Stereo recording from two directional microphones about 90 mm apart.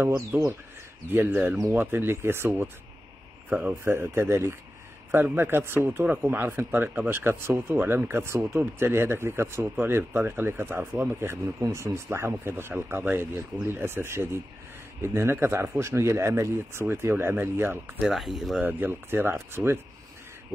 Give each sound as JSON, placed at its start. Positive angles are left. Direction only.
{"t": 0.3, "sound": "speech", "side_deg": -20}
{"t": 3.4, "sound": "speech", "side_deg": -15}
{"t": 3.8, "sound": "speech", "side_deg": -25}
{"t": 16.8, "sound": "speech", "side_deg": -20}
{"t": 18.0, "sound": "speech", "side_deg": 0}
{"t": 18.6, "sound": "speech", "side_deg": -20}